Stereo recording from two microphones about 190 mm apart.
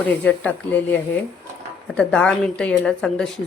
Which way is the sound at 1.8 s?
5° left (ahead or behind).